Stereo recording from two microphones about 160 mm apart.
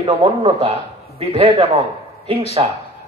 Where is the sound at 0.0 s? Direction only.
40° right (ahead or behind).